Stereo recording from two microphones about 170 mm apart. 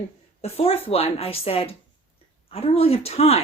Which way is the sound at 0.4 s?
35° left (ahead or behind).